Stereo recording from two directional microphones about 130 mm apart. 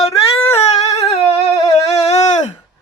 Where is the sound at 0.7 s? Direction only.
55° left (ahead or behind).